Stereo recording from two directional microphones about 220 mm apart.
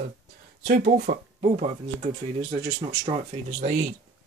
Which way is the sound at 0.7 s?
40° right (ahead or behind).